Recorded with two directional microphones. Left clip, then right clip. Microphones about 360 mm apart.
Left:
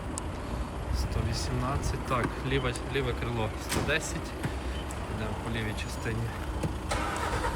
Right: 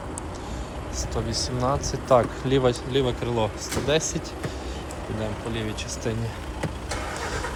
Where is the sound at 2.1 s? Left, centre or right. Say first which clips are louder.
Right 11 dB; centre.